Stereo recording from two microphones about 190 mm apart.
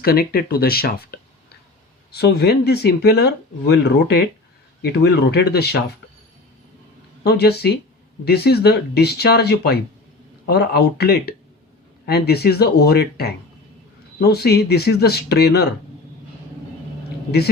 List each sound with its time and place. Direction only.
0.0 s speech: 55° left (ahead or behind)
2.1 s speech: 60° left (ahead or behind)
7.3 s speech: 60° left (ahead or behind)